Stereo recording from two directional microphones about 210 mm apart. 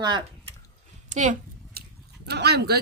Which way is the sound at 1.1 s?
35° right (ahead or behind).